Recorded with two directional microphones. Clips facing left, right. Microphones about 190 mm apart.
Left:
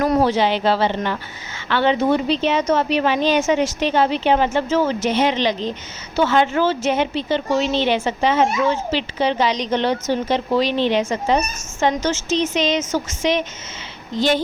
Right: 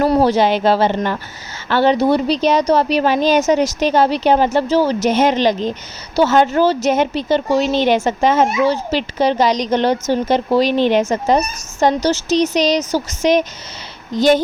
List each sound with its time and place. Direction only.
0.0 s a woman's voice: 40° right (ahead or behind)